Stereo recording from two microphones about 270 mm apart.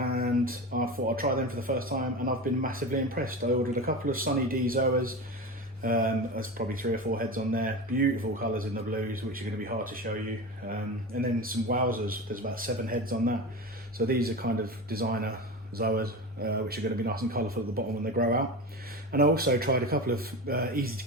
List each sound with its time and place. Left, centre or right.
0.0 s speech: right